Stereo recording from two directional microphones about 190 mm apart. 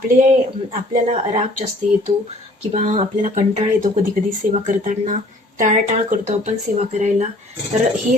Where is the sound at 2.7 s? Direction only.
35° right (ahead or behind).